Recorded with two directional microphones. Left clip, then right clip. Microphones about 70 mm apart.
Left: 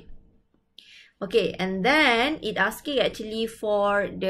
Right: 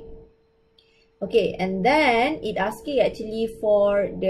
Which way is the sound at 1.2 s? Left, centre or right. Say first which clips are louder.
Right 2 dB; centre.